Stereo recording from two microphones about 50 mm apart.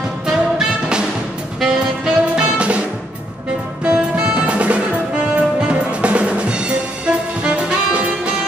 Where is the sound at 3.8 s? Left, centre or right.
Right.